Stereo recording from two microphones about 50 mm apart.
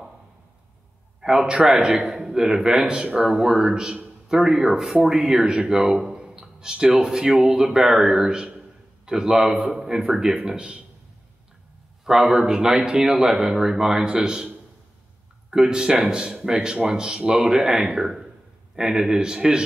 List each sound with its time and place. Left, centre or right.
1.2 s speech: centre
12.0 s speech: centre
15.5 s speech: centre